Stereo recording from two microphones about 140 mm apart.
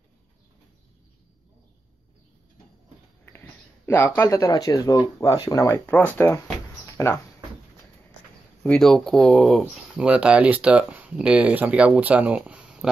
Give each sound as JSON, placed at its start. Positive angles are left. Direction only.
{"t": 3.3, "sound": "speech", "side_deg": 15}
{"t": 6.9, "sound": "a sound", "side_deg": 20}
{"t": 8.6, "sound": "speech", "side_deg": 5}